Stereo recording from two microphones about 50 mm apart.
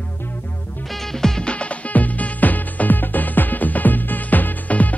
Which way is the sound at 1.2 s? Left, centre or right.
Centre.